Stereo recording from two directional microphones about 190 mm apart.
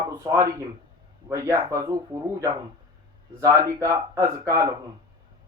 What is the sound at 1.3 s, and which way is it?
Speech, 15° right (ahead or behind).